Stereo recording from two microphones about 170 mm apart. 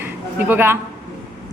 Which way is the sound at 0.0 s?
10° right (ahead or behind).